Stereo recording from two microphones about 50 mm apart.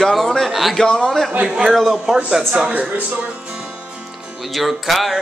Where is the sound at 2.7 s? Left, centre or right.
Right.